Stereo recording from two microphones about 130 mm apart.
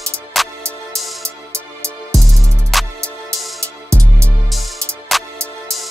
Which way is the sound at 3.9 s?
20° right (ahead or behind).